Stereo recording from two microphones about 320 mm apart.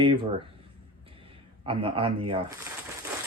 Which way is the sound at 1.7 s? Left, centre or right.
Centre.